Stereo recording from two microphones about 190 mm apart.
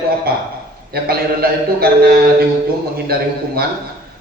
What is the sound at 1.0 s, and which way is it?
A man's voice, 55° right (ahead or behind).